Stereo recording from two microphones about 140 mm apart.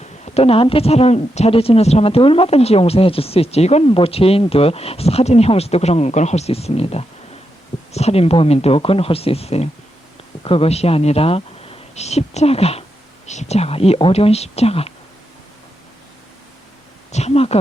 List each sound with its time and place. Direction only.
0.0 s a woman's voice: 50° left (ahead or behind)
17.1 s a woman's voice: 50° left (ahead or behind)